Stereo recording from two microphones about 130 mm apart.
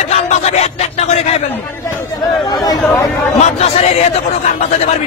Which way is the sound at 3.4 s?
55° left (ahead or behind).